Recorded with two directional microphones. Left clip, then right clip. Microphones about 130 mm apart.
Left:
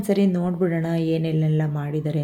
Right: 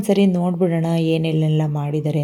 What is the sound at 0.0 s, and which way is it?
A woman's voice, 20° right (ahead or behind).